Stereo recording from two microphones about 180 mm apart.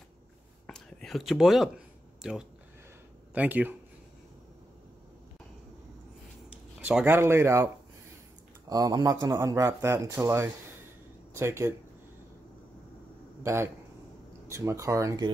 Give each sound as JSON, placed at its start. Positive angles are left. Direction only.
{"t": 0.7, "sound": "a sound", "side_deg": 5}
{"t": 3.3, "sound": "speech", "side_deg": -10}
{"t": 6.8, "sound": "speech", "side_deg": -10}
{"t": 13.4, "sound": "a man's voice", "side_deg": -15}